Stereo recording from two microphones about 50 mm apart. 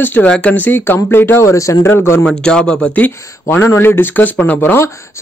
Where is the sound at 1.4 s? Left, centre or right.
Left.